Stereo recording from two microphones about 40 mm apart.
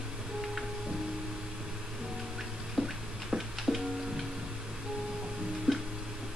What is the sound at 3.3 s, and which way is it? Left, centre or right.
Music, centre.